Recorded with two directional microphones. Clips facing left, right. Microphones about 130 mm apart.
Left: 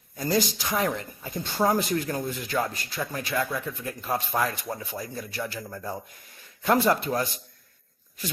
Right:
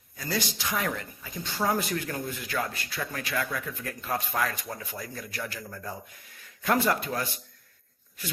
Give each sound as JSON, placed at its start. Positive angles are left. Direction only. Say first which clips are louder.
{"t": 0.6, "sound": "speech", "louder": "left 4 dB", "side_deg": 30}
{"t": 1.3, "sound": "speech", "louder": "left 5 dB", "side_deg": 50}
{"t": 1.6, "sound": "a man's voice", "louder": "left 4 dB", "side_deg": 30}
{"t": 6.6, "sound": "speech", "louder": "left 3 dB", "side_deg": 30}